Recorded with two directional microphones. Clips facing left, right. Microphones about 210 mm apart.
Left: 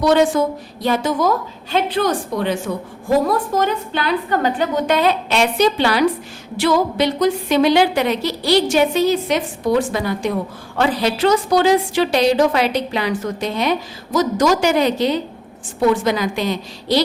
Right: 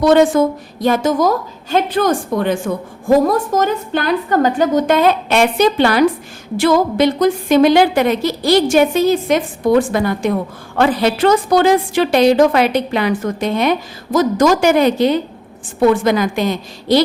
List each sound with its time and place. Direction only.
0.0 s a woman's voice: 50° right (ahead or behind)